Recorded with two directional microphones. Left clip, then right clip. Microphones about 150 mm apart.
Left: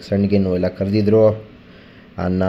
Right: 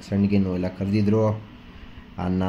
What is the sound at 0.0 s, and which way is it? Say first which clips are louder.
Speech: left 7 dB; 15° left (ahead or behind).